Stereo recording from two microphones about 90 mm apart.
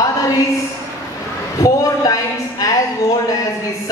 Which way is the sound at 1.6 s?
35° left (ahead or behind).